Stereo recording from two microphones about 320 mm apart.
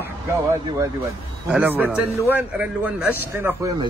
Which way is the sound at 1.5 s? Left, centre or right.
Centre.